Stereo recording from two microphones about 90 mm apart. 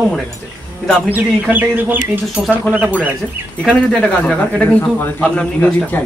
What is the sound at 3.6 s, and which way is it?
Speech, 10° left (ahead or behind).